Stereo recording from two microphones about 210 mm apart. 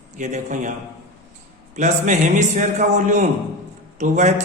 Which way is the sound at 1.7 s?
35° right (ahead or behind).